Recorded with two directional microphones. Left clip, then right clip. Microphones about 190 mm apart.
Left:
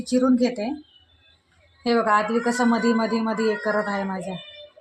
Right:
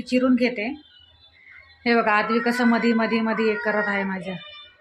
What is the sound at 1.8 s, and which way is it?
Speech, centre (ahead or behind).